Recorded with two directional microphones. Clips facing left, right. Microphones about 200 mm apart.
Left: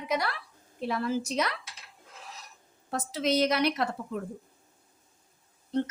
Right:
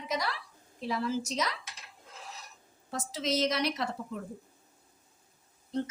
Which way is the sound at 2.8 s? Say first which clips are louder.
Left 4 dB; 60° left (ahead or behind).